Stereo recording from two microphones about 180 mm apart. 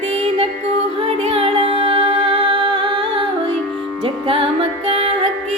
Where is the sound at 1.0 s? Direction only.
30° right (ahead or behind).